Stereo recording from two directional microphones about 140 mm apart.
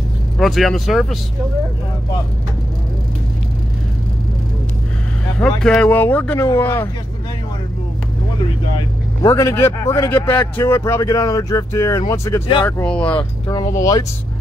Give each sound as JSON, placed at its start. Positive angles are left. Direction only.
{"t": 0.4, "sound": "speech", "side_deg": 0}
{"t": 5.8, "sound": "speech", "side_deg": 15}
{"t": 8.7, "sound": "speech", "side_deg": 25}
{"t": 12.6, "sound": "speech", "side_deg": 10}
{"t": 13.5, "sound": "speech", "side_deg": 25}